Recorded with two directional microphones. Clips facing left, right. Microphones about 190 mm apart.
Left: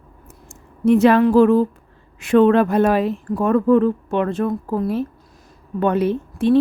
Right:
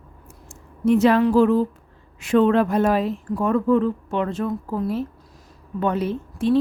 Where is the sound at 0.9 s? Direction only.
60° left (ahead or behind).